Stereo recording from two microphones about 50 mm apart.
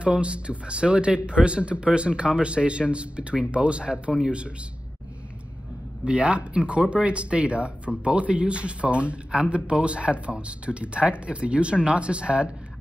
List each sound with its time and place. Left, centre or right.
0.0 s speech: right
6.0 s speech: right